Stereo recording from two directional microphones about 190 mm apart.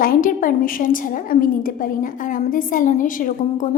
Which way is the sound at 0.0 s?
45° left (ahead or behind).